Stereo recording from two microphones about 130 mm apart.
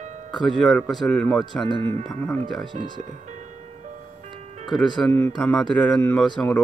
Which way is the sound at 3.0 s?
65° right (ahead or behind).